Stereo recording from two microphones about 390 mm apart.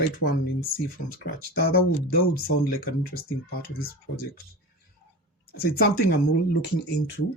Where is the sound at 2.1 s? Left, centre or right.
Left.